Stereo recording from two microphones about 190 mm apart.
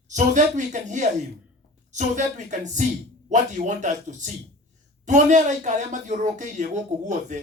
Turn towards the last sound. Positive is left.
turn(degrees=-40)  # may be behind; listen again after turning